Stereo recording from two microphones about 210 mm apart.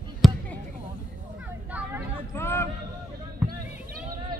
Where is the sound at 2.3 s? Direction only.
10° left (ahead or behind).